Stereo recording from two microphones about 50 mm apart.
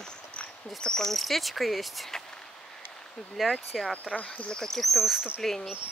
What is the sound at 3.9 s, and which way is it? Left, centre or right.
Speech, left.